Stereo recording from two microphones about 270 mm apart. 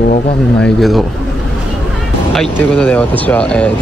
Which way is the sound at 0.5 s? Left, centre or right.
Centre.